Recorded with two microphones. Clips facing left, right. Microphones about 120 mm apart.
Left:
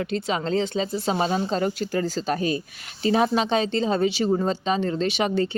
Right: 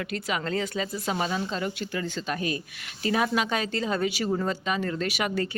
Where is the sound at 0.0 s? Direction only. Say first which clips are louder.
Left 5 dB; 30° left (ahead or behind).